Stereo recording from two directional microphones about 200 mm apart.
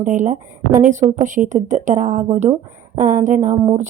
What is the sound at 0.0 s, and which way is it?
A woman's voice, 40° right (ahead or behind).